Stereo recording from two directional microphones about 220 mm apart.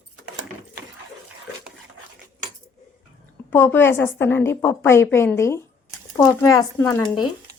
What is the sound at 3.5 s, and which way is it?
A woman's voice, 10° left (ahead or behind).